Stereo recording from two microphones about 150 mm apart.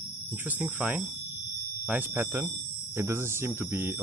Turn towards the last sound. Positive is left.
turn(degrees=-15)  # may be behind; listen again after turning